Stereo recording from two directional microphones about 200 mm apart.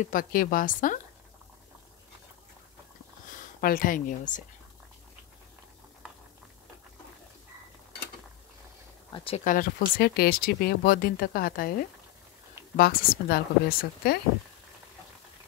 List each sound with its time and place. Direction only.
0.0 s speech: 45° left (ahead or behind)
3.3 s speech: 45° left (ahead or behind)
9.1 s speech: 25° left (ahead or behind)
9.4 s speech: 45° left (ahead or behind)
12.7 s speech: 50° left (ahead or behind)